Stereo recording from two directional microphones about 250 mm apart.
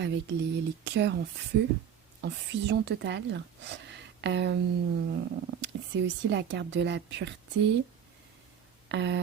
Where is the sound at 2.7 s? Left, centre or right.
Right.